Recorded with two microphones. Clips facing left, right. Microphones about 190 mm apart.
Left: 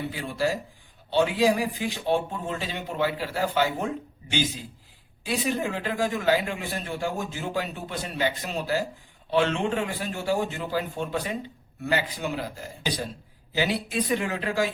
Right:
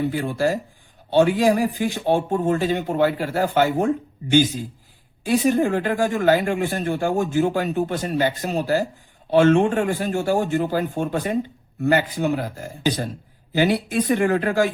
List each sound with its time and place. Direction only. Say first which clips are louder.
0.1 s speech: right 6 dB; 50° right (ahead or behind)
5.2 s speech: right 9 dB; 45° right (ahead or behind)